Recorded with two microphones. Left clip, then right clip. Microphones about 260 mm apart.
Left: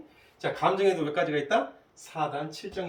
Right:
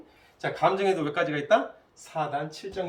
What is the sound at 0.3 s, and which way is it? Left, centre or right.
Speech, centre.